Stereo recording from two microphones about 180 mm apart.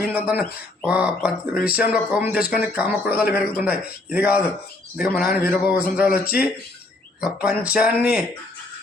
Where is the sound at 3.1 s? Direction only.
55° left (ahead or behind).